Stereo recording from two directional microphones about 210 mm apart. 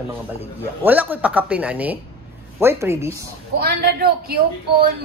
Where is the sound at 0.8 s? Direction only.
10° right (ahead or behind).